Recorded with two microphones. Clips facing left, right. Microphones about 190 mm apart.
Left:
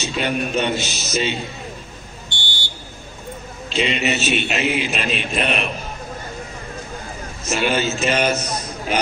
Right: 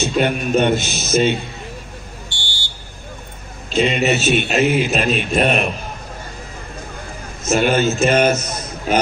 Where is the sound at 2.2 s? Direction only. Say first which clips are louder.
Left 1 dB; 20° left (ahead or behind).